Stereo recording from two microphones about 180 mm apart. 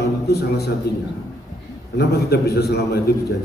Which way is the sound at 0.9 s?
60° left (ahead or behind).